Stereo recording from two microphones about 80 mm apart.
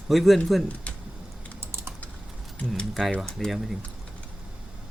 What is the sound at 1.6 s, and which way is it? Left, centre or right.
Typing, right.